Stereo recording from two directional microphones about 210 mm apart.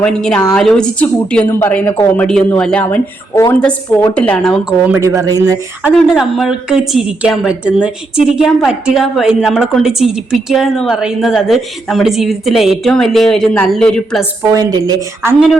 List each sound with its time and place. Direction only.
0.0 s a woman's voice: 5° left (ahead or behind)
4.9 s speech: 15° right (ahead or behind)
6.1 s a woman's voice: centre (ahead or behind)
14.5 s speech: 15° right (ahead or behind)